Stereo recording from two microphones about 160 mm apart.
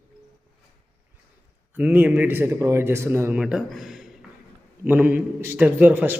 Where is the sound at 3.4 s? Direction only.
Centre (ahead or behind).